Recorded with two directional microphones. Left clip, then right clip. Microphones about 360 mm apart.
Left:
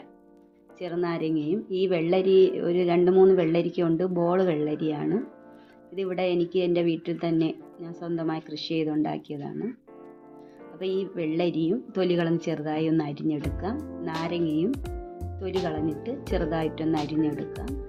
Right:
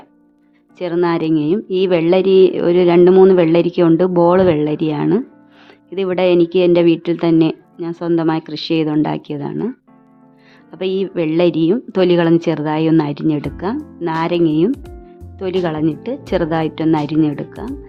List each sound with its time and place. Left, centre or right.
0.8 s speech: right
10.8 s speech: right
14.7 s speech: centre
15.7 s speech: right